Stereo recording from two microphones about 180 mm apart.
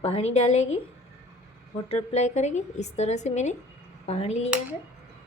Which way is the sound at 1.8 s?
35° left (ahead or behind).